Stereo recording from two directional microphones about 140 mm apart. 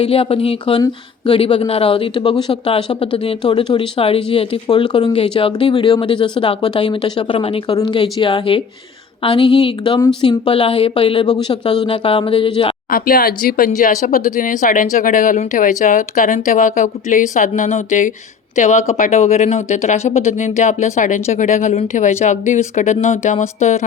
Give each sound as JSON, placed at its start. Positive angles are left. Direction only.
{"t": 0.0, "sound": "speech", "side_deg": 45}
{"t": 12.9, "sound": "speech", "side_deg": 90}
{"t": 13.7, "sound": "speech", "side_deg": 65}